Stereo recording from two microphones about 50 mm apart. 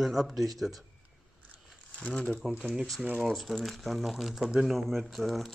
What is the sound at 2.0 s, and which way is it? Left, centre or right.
Speech, centre.